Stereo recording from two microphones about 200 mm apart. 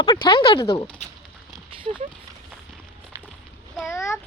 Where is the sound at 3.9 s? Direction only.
15° left (ahead or behind).